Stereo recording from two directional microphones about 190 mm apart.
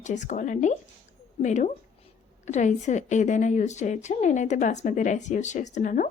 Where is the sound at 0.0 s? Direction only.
40° left (ahead or behind).